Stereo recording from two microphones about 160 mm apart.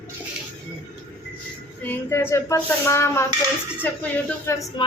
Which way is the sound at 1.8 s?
15° left (ahead or behind).